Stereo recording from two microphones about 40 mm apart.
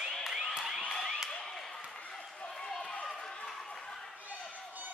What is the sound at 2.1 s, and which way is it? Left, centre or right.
Run, left.